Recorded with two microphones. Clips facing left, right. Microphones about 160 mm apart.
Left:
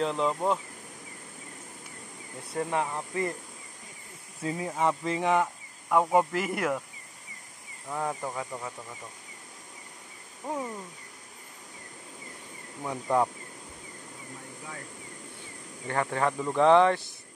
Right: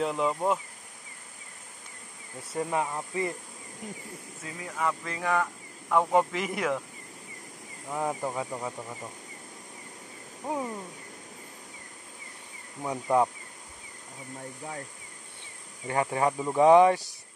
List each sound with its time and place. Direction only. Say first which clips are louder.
0.0 s speech: even; 5° right (ahead or behind)
2.5 s speech: even; 5° right (ahead or behind)
4.6 s speech: left 2 dB; 25° left (ahead or behind)
5.9 s speech: even; 5° left (ahead or behind)
7.9 s speech: right 2 dB; 10° right (ahead or behind)
10.4 s speech: right 1 dB; 10° right (ahead or behind)
12.8 s speech: right 1 dB; 10° right (ahead or behind)
15.9 s speech: right 1 dB; 15° right (ahead or behind)